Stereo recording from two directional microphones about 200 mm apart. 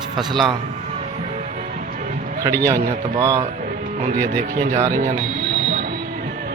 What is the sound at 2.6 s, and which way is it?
Speech, 15° right (ahead or behind).